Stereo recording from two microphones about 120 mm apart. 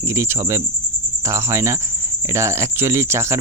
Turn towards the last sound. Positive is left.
turn(degrees=-20)  # may be behind; listen again after turning